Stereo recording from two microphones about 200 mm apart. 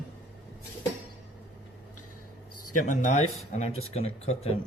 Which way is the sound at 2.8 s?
40° left (ahead or behind).